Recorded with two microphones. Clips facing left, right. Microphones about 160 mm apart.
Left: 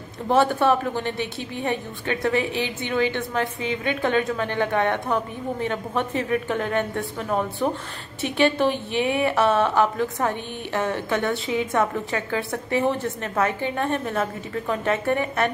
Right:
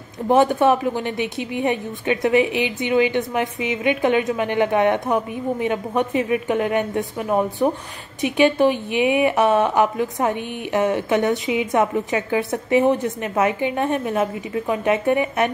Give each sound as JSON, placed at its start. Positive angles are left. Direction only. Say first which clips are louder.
{"t": 0.3, "sound": "a woman's voice", "louder": "right 3 dB", "side_deg": -15}